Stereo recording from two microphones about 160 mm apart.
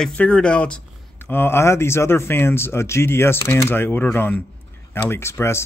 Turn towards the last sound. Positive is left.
turn(degrees=15)  # may be behind; listen again after turning